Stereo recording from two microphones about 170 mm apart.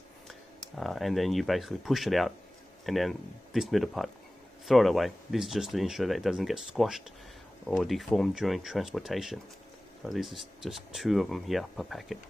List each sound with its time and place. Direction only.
0.3 s speech: centre (ahead or behind)